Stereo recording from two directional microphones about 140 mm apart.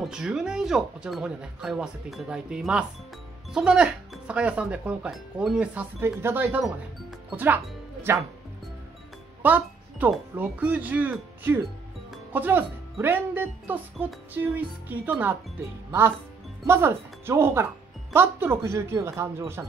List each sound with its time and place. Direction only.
0.1 s speech: 5° right (ahead or behind)
6.6 s speech: centre (ahead or behind)
7.3 s speech: 15° right (ahead or behind)
9.4 s music: 10° right (ahead or behind)
10.3 s speech: 10° right (ahead or behind)
16.6 s speech: 20° right (ahead or behind)